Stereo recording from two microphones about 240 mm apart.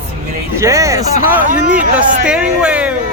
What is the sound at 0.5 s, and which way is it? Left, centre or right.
Speech, centre.